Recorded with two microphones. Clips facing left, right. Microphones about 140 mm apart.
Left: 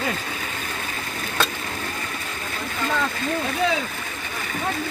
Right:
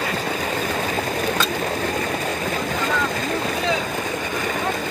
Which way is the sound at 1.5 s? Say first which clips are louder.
Right 8 dB; 45° right (ahead or behind).